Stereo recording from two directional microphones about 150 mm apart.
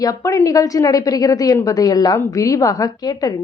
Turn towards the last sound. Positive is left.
turn(degrees=25)  # may be behind; listen again after turning